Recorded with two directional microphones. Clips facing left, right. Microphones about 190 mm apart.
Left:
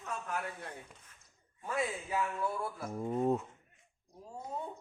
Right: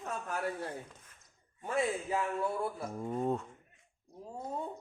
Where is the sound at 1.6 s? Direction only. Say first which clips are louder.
Right 3 dB; 30° right (ahead or behind).